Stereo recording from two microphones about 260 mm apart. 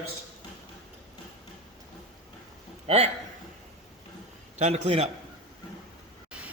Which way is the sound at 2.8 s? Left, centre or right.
Right.